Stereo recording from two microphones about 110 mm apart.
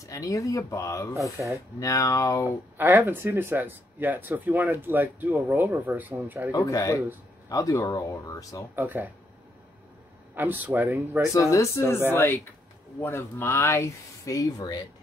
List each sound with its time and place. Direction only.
0.0 s speech: 30° left (ahead or behind)
1.4 s speech: 15° right (ahead or behind)
1.8 s speech: 30° left (ahead or behind)
2.8 s speech: 20° right (ahead or behind)
6.5 s speech: 30° left (ahead or behind)
8.7 s speech: 15° right (ahead or behind)
10.3 s speech: 20° right (ahead or behind)
11.3 s speech: 25° left (ahead or behind)